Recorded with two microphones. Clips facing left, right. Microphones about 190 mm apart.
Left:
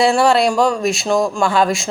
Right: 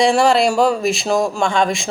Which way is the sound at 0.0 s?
Centre (ahead or behind).